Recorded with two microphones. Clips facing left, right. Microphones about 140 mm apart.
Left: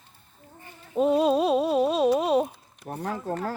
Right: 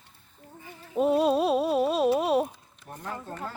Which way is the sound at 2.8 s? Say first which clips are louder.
Left 6 dB; 70° left (ahead or behind).